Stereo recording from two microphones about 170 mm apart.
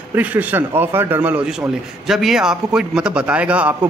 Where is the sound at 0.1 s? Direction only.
10° right (ahead or behind).